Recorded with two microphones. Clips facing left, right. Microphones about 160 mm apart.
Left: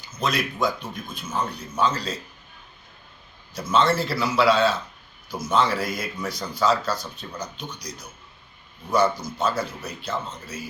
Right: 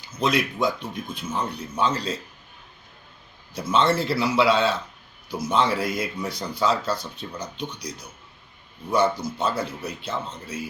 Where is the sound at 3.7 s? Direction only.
25° right (ahead or behind).